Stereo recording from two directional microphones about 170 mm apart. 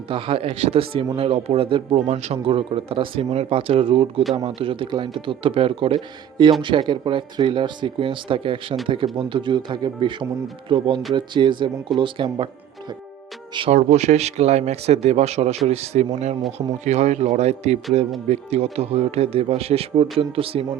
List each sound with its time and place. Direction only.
0.1 s a man's voice: 30° right (ahead or behind)
13.5 s speech: 30° right (ahead or behind)
13.7 s a man's voice: 45° right (ahead or behind)